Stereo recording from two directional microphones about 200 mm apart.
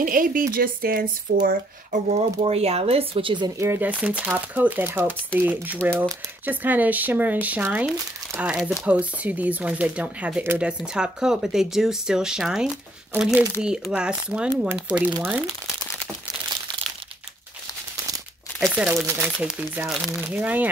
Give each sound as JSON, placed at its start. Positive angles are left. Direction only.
{"t": 0.0, "sound": "speech", "side_deg": -45}
{"t": 2.0, "sound": "speech", "side_deg": -30}
{"t": 18.6, "sound": "speech", "side_deg": -5}